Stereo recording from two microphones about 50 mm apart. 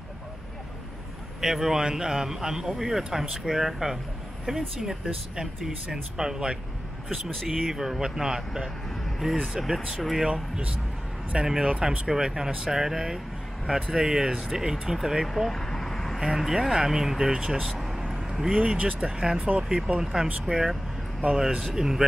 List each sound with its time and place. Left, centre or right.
1.4 s a man's voice: centre
10.3 s a man's voice: right
15.5 s a sound: centre
16.3 s a man's voice: centre
17.6 s vehicle: centre
18.5 s speech: centre
20.0 s a man's voice: centre